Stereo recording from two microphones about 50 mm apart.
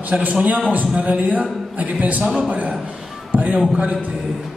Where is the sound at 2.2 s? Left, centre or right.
Centre.